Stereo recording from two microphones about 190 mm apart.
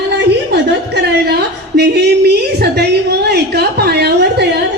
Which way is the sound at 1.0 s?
60° right (ahead or behind).